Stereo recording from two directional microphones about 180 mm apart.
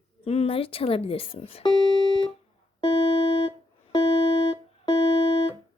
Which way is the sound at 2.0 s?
25° right (ahead or behind).